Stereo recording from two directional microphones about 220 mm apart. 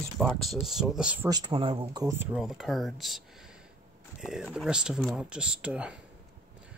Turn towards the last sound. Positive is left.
turn(degrees=-5)  # may be behind; listen again after turning